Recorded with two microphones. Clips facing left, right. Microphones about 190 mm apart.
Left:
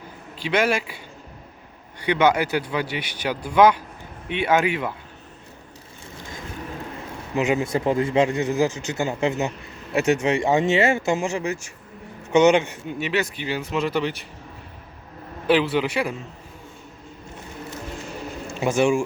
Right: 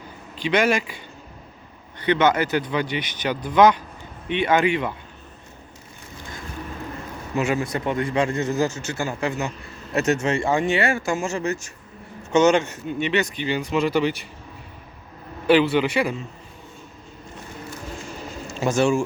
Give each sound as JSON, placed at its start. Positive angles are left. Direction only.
{"t": 0.3, "sound": "speech", "side_deg": 5}
{"t": 7.3, "sound": "speech", "side_deg": 20}
{"t": 8.3, "sound": "speech", "side_deg": 15}
{"t": 15.4, "sound": "speech", "side_deg": 0}
{"t": 18.6, "sound": "speech", "side_deg": 15}